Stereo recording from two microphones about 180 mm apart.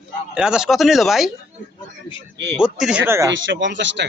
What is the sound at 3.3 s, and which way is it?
Speech, 90° right.